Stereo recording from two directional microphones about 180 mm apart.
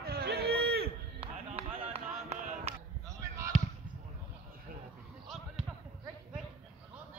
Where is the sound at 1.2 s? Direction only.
30° right (ahead or behind).